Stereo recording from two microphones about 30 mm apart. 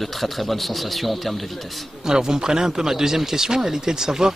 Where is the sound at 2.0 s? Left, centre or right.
Right.